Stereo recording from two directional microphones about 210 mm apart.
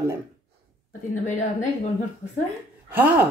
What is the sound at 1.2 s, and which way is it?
Speech, 35° left (ahead or behind).